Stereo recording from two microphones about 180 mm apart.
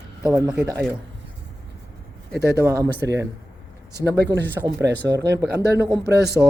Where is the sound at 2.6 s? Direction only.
15° right (ahead or behind).